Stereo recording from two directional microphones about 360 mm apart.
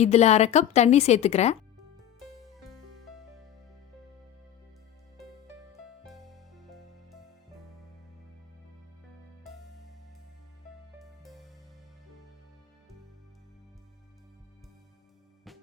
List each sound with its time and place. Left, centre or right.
0.0 s a woman's voice: centre
6.1 s music: centre
9.4 s music: centre
11.0 s music: centre